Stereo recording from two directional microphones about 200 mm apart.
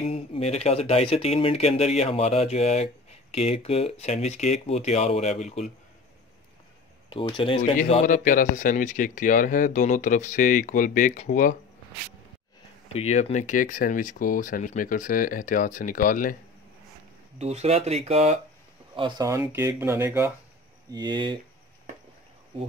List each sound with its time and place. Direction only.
0.0 s speech: 30° left (ahead or behind)
7.1 s speech: 25° left (ahead or behind)
7.9 s speech: 40° left (ahead or behind)
12.9 s speech: 35° left (ahead or behind)
17.4 s speech: 30° right (ahead or behind)
18.9 s speech: 20° right (ahead or behind)
20.9 s speech: 20° right (ahead or behind)